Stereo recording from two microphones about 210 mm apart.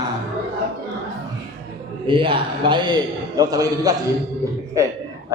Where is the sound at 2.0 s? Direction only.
25° right (ahead or behind).